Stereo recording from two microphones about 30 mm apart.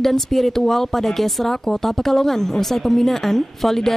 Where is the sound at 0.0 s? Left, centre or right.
Centre.